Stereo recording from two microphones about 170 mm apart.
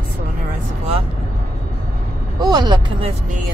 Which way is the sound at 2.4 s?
25° right (ahead or behind).